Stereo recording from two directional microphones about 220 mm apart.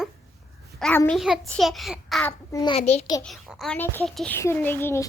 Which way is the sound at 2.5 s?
15° left (ahead or behind).